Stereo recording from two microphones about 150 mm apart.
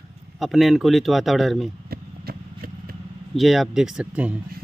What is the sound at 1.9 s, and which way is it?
Vehicle, 85° right.